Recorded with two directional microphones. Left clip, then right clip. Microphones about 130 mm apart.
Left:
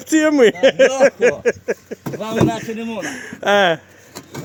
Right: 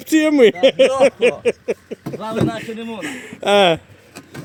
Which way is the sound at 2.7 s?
25° right (ahead or behind).